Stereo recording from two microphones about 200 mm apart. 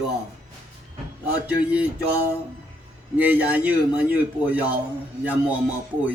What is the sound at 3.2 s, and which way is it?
Speech, 5° right (ahead or behind).